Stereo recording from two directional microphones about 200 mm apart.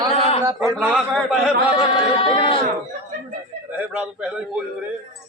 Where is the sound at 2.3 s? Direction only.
25° left (ahead or behind).